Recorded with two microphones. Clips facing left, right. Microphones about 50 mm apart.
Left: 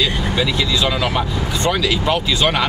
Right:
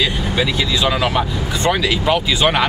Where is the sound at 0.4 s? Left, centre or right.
Centre.